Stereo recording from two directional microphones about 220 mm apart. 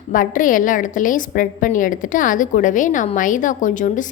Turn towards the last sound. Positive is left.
turn(degrees=35)  # may be behind; listen again after turning